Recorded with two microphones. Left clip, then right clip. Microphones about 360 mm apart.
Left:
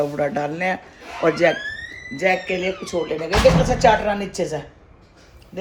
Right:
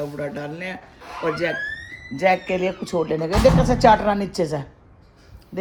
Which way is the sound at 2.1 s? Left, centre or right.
Centre.